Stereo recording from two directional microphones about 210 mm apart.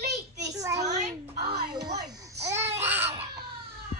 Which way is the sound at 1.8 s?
50° right (ahead or behind).